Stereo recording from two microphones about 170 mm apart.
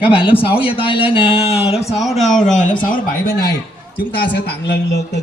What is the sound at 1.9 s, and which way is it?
Speech, centre (ahead or behind).